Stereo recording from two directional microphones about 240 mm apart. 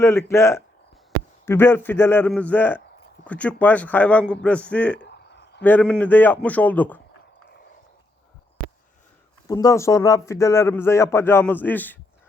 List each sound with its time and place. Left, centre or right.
0.0 s a man's voice: centre
4.9 s a sound: left
5.6 s a man's voice: centre
9.5 s a man's voice: centre